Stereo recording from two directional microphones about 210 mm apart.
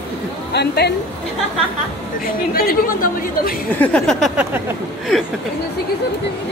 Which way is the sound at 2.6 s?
45° left (ahead or behind).